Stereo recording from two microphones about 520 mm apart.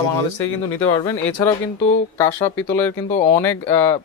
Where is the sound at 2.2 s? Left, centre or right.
Centre.